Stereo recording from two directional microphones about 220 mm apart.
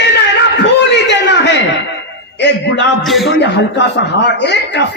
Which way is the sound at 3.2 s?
50° left (ahead or behind).